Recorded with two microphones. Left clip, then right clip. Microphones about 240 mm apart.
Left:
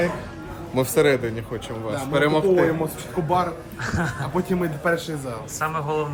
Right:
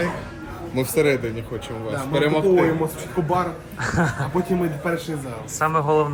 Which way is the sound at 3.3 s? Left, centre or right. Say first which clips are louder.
Left 2 dB; centre.